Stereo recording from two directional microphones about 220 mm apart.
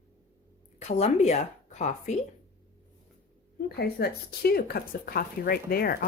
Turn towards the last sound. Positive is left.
turn(degrees=40)  # may be behind; listen again after turning